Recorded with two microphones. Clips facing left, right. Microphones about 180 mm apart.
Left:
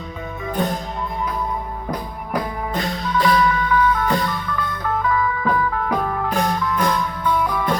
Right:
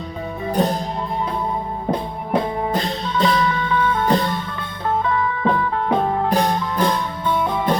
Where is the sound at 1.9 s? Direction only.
25° right (ahead or behind).